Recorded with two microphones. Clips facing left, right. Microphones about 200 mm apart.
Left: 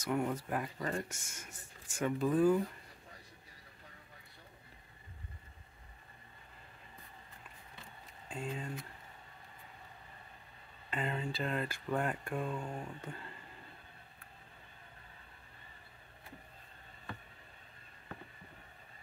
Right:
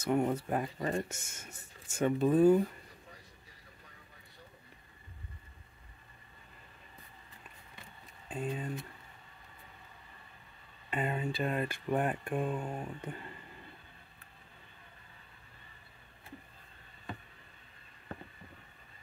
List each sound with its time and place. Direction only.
0.0 s speech: 25° right (ahead or behind)
8.3 s speech: 20° right (ahead or behind)
10.9 s speech: 20° right (ahead or behind)